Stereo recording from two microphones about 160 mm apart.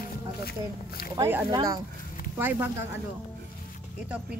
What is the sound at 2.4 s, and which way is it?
Speech, 10° right (ahead or behind).